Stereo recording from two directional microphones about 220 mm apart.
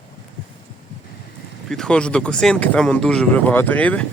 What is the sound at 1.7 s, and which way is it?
Speech, 5° left (ahead or behind).